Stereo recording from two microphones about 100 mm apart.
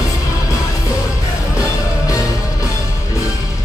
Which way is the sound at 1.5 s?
35° left (ahead or behind).